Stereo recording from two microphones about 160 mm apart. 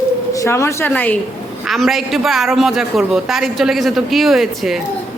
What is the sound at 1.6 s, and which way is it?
A man's voice, centre (ahead or behind).